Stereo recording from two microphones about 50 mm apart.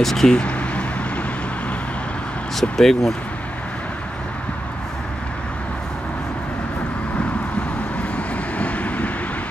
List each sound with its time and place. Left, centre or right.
0.0 s speech: centre
0.3 s a sound: left
2.6 s speech: centre
8.5 s vehicle: left